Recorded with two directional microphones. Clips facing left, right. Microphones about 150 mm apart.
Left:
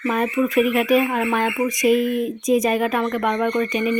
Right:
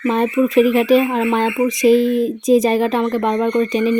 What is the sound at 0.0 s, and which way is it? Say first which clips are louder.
Speech: right 4 dB; 25° right (ahead or behind).